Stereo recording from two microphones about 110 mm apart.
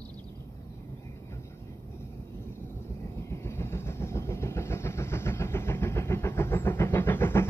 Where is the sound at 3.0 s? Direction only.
25° left (ahead or behind).